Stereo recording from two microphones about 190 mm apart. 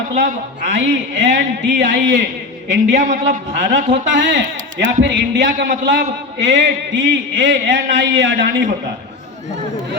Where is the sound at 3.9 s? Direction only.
75° right (ahead or behind).